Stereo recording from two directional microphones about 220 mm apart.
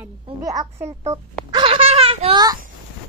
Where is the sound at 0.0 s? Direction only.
15° right (ahead or behind).